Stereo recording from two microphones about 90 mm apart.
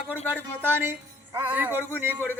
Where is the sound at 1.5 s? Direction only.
20° right (ahead or behind).